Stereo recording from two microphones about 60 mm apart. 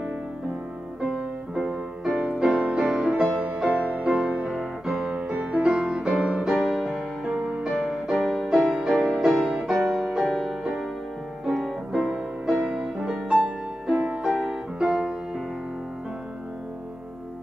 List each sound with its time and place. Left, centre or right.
1.5 s music: centre
3.6 s music: right
4.1 s music: centre
5.0 s music: centre
13.9 s music: right
14.2 s music: centre
14.8 s music: centre